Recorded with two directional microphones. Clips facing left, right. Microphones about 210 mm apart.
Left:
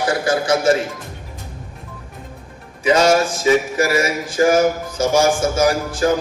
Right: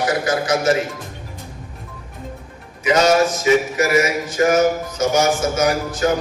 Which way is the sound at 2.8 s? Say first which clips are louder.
Even; 30° left (ahead or behind).